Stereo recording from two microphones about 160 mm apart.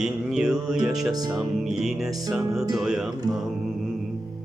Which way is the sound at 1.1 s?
25° right (ahead or behind).